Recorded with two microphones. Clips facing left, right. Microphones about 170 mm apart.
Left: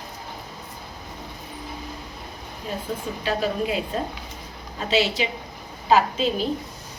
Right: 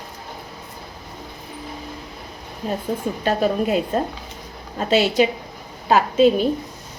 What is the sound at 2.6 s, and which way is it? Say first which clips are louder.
A woman's voice: right 6 dB; 45° right (ahead or behind).